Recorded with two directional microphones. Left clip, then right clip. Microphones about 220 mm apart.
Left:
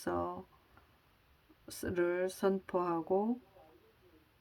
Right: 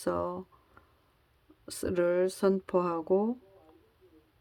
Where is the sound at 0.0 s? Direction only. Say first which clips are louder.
Right 5 dB; 30° right (ahead or behind).